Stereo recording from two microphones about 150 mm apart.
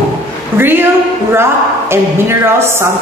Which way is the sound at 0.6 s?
15° right (ahead or behind).